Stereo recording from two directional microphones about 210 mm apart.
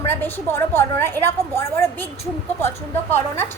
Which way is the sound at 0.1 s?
10° left (ahead or behind).